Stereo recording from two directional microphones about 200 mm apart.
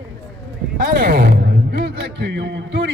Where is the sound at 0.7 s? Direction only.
45° right (ahead or behind).